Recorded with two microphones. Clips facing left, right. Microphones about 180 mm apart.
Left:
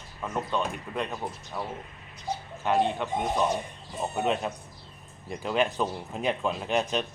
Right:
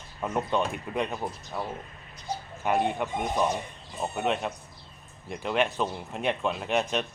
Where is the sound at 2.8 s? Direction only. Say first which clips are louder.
Even; 10° right (ahead or behind).